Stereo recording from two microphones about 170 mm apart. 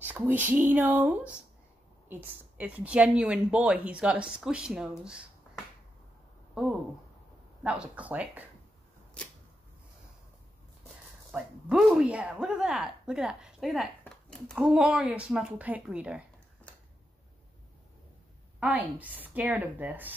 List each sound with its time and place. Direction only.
0.0 s a woman's voice: 10° right (ahead or behind)
6.6 s a woman's voice: 5° right (ahead or behind)
9.2 s a sound: 5° left (ahead or behind)
11.3 s speech: centre (ahead or behind)
18.6 s a woman's voice: 10° right (ahead or behind)